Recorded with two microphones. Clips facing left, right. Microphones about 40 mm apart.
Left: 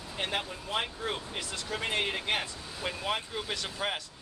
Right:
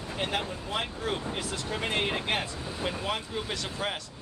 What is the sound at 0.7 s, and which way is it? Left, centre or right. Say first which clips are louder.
Speech: right 1 dB; centre.